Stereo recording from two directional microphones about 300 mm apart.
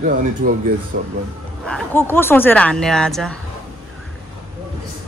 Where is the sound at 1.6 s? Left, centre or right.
Centre.